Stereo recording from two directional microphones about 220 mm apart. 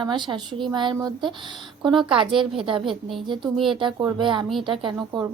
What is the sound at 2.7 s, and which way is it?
A woman's voice, 25° right (ahead or behind).